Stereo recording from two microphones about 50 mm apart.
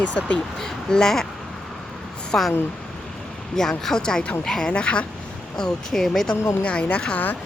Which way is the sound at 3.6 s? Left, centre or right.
Centre.